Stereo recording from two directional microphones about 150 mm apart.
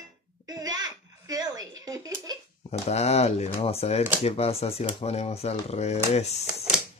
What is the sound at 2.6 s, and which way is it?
Speech, 45° left (ahead or behind).